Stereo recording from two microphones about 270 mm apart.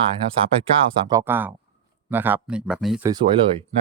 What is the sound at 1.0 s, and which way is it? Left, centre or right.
Speech, centre.